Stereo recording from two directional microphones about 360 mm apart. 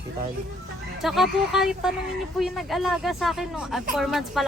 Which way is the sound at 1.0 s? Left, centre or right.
Centre.